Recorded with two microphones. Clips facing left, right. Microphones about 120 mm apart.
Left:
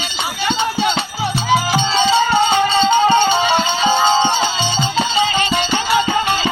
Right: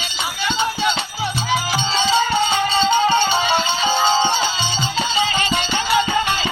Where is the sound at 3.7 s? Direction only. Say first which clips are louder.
Left 3 dB; 20° left (ahead or behind).